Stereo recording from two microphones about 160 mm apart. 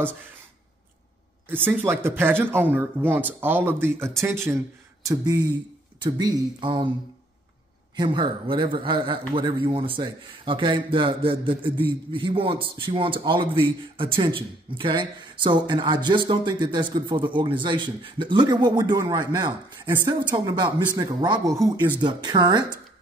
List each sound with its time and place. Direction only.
1.5 s speech: 15° right (ahead or behind); by 6.9 s 30° right (ahead or behind)
7.9 s a man's voice: 30° right (ahead or behind)